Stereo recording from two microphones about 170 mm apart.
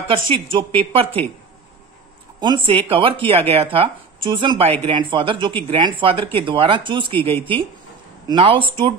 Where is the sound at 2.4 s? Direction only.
30° right (ahead or behind).